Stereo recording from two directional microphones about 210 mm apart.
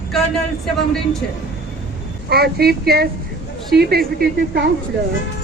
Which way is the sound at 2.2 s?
50° right (ahead or behind).